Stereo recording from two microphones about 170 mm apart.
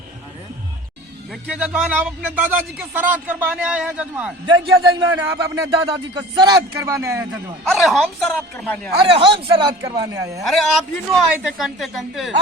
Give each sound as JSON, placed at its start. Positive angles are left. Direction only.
{"t": 1.3, "sound": "speech", "side_deg": -5}
{"t": 4.4, "sound": "speech", "side_deg": -25}
{"t": 5.1, "sound": "speech", "side_deg": -15}
{"t": 5.7, "sound": "speech", "side_deg": -25}
{"t": 7.6, "sound": "a man's voice", "side_deg": 0}
{"t": 9.0, "sound": "speech", "side_deg": -30}
{"t": 10.4, "sound": "a man's voice", "side_deg": 0}